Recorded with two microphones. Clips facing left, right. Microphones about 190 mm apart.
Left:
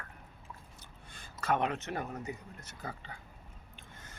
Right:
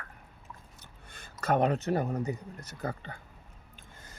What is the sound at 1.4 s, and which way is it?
Speech, 40° right (ahead or behind).